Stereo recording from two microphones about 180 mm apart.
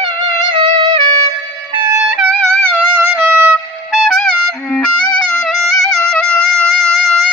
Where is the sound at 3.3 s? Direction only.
10° right (ahead or behind).